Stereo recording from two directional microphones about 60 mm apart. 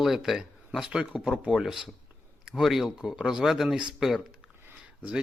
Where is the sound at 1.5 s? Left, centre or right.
Centre.